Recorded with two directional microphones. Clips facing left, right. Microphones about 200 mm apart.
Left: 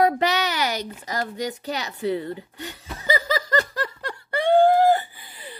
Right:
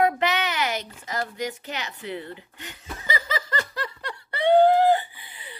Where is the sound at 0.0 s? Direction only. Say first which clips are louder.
Left 2 dB; 35° left (ahead or behind).